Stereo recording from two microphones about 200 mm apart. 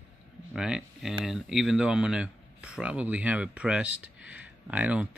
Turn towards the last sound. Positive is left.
turn(degrees=-5)  # may be behind; listen again after turning